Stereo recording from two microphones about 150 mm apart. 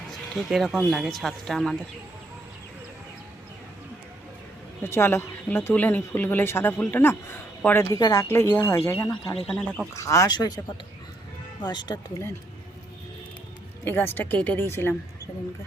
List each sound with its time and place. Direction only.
0.1 s speech: centre (ahead or behind)
4.8 s speech: 15° left (ahead or behind)
9.3 s speech: 5° left (ahead or behind)
9.9 s speech: 20° left (ahead or behind)
11.6 s speech: 30° left (ahead or behind)
13.8 s speech: 15° left (ahead or behind)